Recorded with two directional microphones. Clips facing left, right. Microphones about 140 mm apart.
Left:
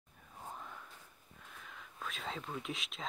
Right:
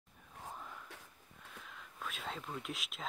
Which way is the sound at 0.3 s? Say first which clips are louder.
Left 1 dB; centre (ahead or behind).